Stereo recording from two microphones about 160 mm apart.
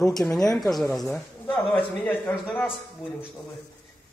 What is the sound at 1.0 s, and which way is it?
A man's voice, 10° left (ahead or behind).